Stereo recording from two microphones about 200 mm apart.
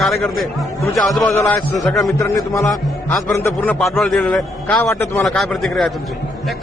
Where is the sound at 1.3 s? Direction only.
15° left (ahead or behind).